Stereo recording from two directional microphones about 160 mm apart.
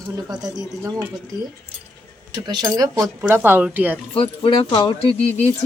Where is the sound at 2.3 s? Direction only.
25° right (ahead or behind).